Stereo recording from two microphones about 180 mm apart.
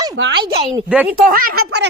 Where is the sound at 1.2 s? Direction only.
50° right (ahead or behind).